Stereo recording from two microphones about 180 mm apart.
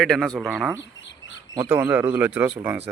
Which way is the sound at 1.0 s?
90° left.